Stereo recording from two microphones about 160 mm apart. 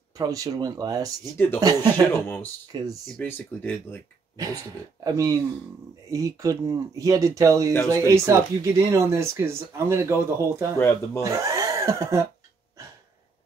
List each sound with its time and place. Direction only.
0.2 s speech: 20° right (ahead or behind)
3.1 s speech: 10° left (ahead or behind)
4.4 s speech: 20° right (ahead or behind)